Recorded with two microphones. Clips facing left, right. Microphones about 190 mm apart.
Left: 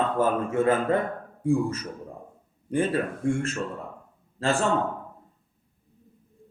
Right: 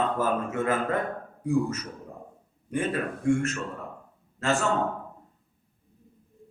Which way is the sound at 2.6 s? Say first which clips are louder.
Left 3 dB; 30° left (ahead or behind).